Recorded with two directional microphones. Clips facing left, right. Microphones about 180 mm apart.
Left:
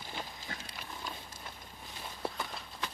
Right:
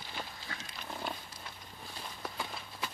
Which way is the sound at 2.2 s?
30° left (ahead or behind).